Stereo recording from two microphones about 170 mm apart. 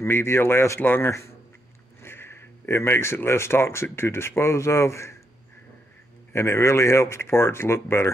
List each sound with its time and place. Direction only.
0.0 s speech: 15° left (ahead or behind)
6.3 s speech: 15° left (ahead or behind)